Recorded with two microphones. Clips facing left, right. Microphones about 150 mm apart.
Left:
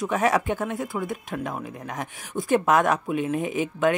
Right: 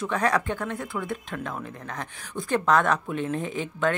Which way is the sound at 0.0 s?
20° left (ahead or behind).